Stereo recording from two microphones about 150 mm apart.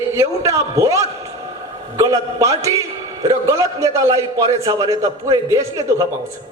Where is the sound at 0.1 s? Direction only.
20° right (ahead or behind).